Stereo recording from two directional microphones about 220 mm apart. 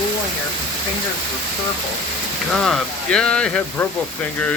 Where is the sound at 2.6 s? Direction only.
Centre (ahead or behind).